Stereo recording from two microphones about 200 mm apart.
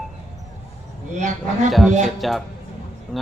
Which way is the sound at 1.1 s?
40° right (ahead or behind).